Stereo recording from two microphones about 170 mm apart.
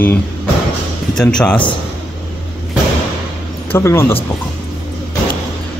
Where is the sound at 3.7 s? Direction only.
15° left (ahead or behind).